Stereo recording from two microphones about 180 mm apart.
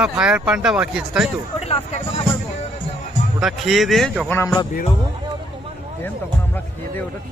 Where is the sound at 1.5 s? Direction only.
35° left (ahead or behind).